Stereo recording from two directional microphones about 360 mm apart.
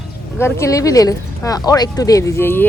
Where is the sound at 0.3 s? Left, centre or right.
Centre.